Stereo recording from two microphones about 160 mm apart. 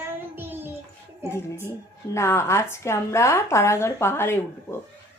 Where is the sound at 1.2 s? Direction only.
15° left (ahead or behind).